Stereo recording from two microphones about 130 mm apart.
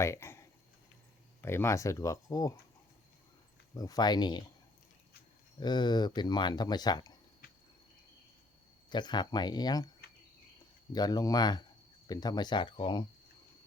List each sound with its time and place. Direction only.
0.0 s speech: 20° left (ahead or behind)
3.8 s speech: 30° left (ahead or behind)
5.5 s speech: 35° left (ahead or behind)
8.9 s speech: 35° left (ahead or behind)
10.9 s speech: 30° left (ahead or behind)